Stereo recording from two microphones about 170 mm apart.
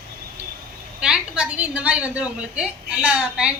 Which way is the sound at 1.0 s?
5° right (ahead or behind).